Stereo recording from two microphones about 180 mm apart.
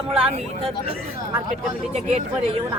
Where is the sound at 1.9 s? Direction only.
35° right (ahead or behind).